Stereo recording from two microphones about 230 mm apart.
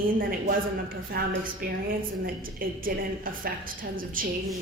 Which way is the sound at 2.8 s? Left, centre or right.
Right.